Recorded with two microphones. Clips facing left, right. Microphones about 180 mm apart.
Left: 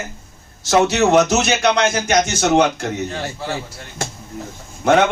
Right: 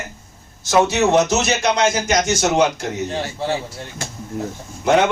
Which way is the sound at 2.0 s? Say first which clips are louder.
Left 1 dB; 60° left (ahead or behind).